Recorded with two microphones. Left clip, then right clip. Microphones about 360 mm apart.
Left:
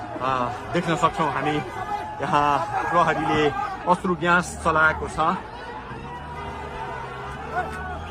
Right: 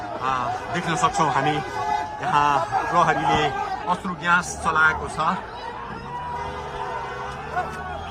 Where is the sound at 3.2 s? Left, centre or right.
Right.